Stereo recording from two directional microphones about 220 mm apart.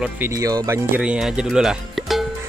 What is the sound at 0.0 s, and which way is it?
Speech, 10° right (ahead or behind).